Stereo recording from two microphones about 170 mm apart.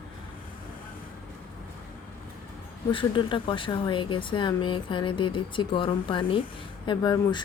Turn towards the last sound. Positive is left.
turn(degrees=25)  # may be behind; listen again after turning